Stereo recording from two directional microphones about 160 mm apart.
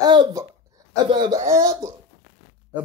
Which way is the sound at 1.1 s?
30° right (ahead or behind).